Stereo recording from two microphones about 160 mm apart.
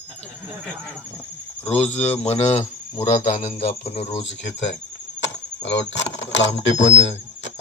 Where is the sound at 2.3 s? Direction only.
40° left (ahead or behind).